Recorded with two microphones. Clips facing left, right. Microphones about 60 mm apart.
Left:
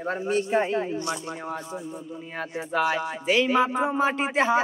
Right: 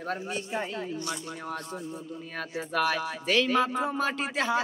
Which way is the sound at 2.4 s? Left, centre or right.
Centre.